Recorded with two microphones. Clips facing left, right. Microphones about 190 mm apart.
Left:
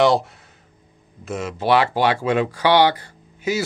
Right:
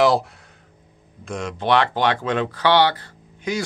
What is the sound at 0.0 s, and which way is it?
Speech, centre (ahead or behind).